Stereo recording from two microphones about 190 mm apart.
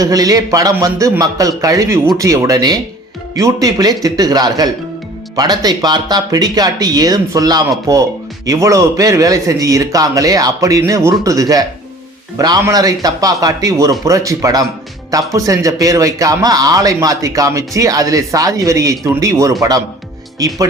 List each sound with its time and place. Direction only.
0.0 s a man's voice: 20° right (ahead or behind)